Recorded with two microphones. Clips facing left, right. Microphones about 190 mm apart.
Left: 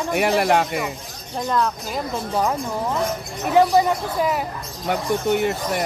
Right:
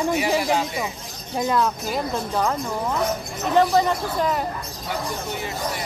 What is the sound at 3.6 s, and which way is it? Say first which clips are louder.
Speech: left 2 dB; 10° left (ahead or behind).